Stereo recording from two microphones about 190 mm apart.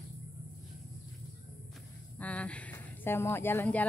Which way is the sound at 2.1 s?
5° left (ahead or behind).